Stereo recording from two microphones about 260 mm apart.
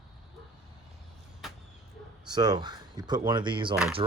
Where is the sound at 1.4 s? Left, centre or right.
Centre.